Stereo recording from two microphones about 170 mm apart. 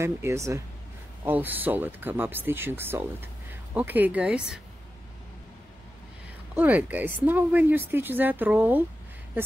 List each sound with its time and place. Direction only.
0.0 s speech: 15° right (ahead or behind)
6.5 s speech: 10° right (ahead or behind)